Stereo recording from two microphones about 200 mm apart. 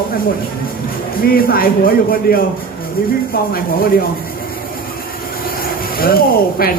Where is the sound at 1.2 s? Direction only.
50° left (ahead or behind).